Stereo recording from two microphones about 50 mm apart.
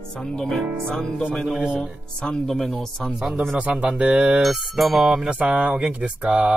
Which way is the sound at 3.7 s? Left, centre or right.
Right.